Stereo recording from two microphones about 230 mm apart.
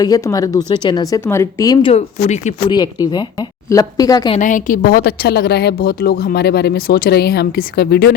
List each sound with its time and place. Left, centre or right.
0.0 s speech: centre
2.6 s speech: centre
4.4 s a woman's voice: left